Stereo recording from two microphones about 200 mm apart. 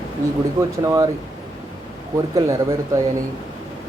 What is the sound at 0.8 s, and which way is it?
Speech, 15° right (ahead or behind).